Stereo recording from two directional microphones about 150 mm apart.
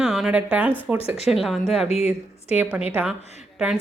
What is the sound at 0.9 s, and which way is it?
Speech, 40° left (ahead or behind).